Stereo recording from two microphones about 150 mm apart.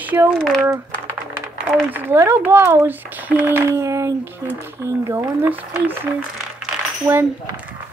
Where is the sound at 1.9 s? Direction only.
15° right (ahead or behind).